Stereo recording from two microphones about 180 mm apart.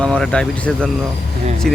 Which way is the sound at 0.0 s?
5° left (ahead or behind).